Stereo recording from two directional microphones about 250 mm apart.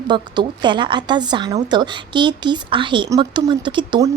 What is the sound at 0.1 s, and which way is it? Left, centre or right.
A woman's voice, centre.